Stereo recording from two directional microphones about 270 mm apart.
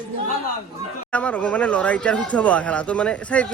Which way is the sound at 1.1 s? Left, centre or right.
Centre.